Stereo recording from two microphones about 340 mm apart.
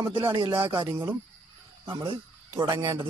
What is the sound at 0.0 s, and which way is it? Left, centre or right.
Speech, centre.